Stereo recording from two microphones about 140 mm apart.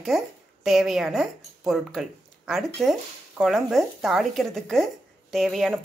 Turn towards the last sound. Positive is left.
turn(degrees=0)  # may be behind; listen again after turning